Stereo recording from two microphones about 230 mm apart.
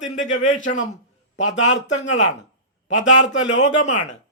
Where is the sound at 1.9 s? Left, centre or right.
Left.